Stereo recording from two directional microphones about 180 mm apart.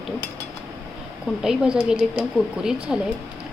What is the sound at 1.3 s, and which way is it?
Speech, 5° right (ahead or behind).